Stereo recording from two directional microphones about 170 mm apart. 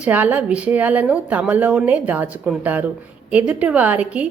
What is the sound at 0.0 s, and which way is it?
A woman's voice, 10° right (ahead or behind).